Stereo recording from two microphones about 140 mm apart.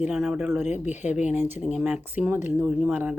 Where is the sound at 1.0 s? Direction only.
10° right (ahead or behind).